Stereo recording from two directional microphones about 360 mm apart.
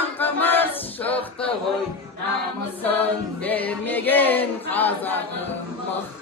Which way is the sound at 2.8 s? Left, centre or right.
Centre.